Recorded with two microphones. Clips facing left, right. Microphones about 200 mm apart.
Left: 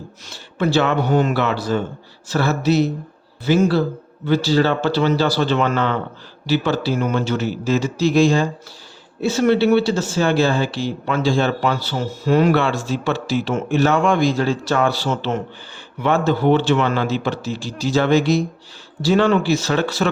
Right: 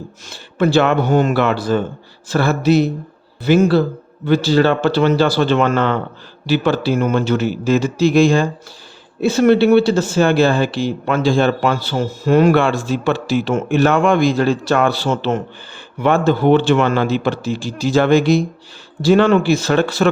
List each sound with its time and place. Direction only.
0.3 s a man's voice: 55° right (ahead or behind)